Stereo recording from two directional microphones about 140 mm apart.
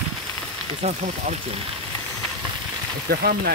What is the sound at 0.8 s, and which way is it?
Speech, 50° right (ahead or behind).